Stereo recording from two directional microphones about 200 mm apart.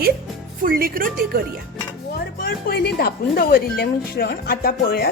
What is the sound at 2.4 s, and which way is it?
Speech, 50° left (ahead or behind).